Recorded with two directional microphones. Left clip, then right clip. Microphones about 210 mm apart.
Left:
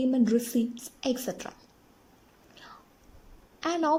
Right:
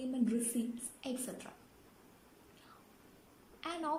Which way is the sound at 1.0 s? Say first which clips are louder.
Left 13 dB; 40° left (ahead or behind).